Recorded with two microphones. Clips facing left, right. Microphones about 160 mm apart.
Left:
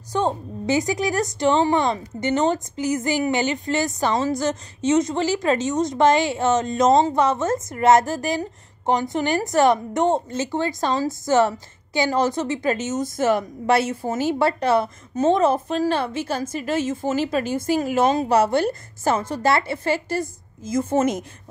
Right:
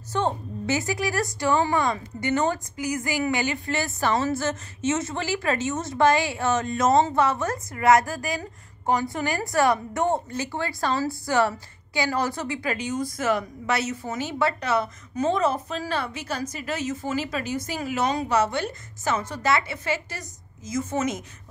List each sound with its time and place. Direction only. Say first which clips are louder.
0.1 s a woman's voice: left 3 dB; 15° left (ahead or behind); by 20.2 s 30° left (ahead or behind)
20.6 s a woman's voice: left 5 dB; 55° left (ahead or behind)